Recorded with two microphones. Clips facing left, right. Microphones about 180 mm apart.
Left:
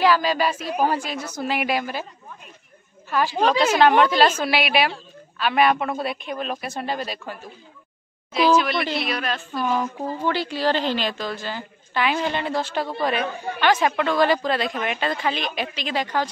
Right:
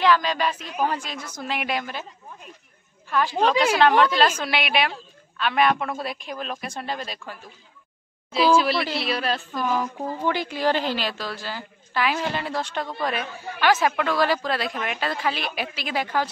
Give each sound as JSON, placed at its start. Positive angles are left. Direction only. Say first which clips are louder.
{"t": 0.0, "sound": "speech", "louder": "left 2 dB", "side_deg": 5}
{"t": 0.7, "sound": "a woman's voice", "louder": "left 5 dB", "side_deg": 40}
{"t": 0.9, "sound": "a woman's voice", "louder": "left 5 dB", "side_deg": 5}
{"t": 3.1, "sound": "a woman's voice", "louder": "left 1 dB", "side_deg": 5}
{"t": 8.9, "sound": "a woman's voice", "louder": "even", "side_deg": -30}
{"t": 9.5, "sound": "a woman's voice", "louder": "left 1 dB", "side_deg": 0}
{"t": 10.2, "sound": "a woman's voice", "louder": "left 1 dB", "side_deg": -15}